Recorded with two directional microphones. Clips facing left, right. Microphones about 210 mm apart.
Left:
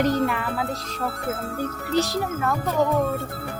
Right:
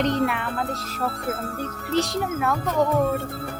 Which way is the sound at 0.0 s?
Centre (ahead or behind).